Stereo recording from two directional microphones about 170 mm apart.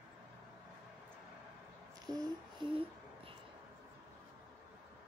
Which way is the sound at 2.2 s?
30° right (ahead or behind).